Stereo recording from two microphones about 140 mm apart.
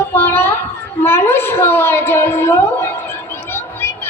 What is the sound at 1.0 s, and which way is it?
A woman's voice, 15° left (ahead or behind).